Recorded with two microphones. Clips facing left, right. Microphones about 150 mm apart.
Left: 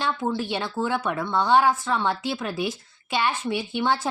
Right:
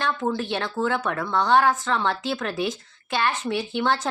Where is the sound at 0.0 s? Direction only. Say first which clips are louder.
Right 1 dB; 10° left (ahead or behind).